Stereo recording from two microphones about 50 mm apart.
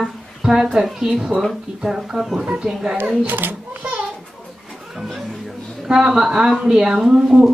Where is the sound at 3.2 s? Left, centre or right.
Right.